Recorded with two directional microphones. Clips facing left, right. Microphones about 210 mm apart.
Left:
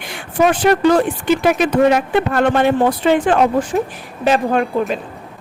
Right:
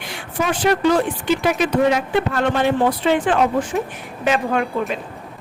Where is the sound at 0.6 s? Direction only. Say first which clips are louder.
Left 1 dB; 50° left (ahead or behind).